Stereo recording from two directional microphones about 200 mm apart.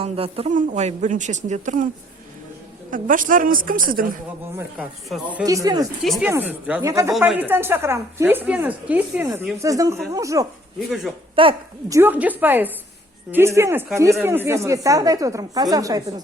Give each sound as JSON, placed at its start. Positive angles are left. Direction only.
{"t": 0.0, "sound": "speech", "side_deg": -30}
{"t": 2.9, "sound": "a woman's voice", "side_deg": -40}
{"t": 4.5, "sound": "speech", "side_deg": -5}
{"t": 5.5, "sound": "a woman's voice", "side_deg": -15}
{"t": 6.0, "sound": "a woman's voice", "side_deg": 0}
{"t": 10.8, "sound": "speech", "side_deg": 0}
{"t": 11.3, "sound": "a woman's voice", "side_deg": -25}
{"t": 11.9, "sound": "a woman's voice", "side_deg": -10}